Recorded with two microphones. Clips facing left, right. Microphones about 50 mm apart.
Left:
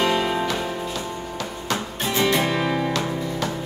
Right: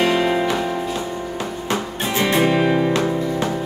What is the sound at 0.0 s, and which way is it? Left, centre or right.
Music, right.